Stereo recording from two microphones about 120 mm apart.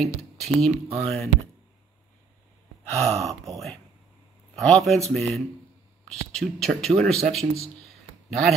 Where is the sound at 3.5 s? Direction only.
Centre (ahead or behind).